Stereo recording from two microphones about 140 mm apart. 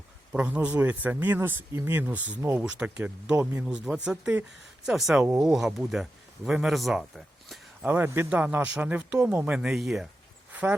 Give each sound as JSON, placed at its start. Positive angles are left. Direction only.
{"t": 0.3, "sound": "speech", "side_deg": -10}
{"t": 3.7, "sound": "speech", "side_deg": -5}
{"t": 7.4, "sound": "a sound", "side_deg": 0}
{"t": 7.9, "sound": "speech", "side_deg": -15}